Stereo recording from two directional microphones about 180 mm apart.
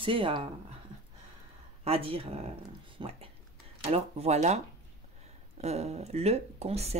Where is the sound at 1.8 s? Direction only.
30° right (ahead or behind).